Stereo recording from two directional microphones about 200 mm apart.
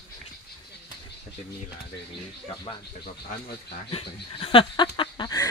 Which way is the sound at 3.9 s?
25° left (ahead or behind).